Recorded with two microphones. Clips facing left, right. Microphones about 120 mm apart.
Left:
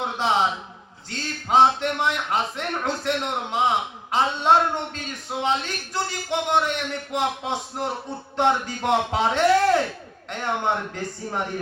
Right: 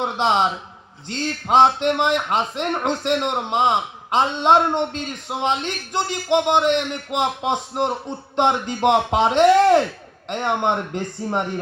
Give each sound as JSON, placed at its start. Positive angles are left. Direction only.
{"t": 0.0, "sound": "a man's voice", "side_deg": -20}